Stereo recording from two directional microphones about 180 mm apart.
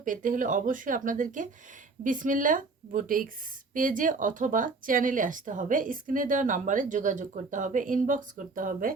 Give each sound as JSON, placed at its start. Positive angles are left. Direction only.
{"t": 0.0, "sound": "a woman's voice", "side_deg": -45}